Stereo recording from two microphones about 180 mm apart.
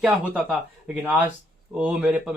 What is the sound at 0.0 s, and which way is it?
Speech, 5° right (ahead or behind).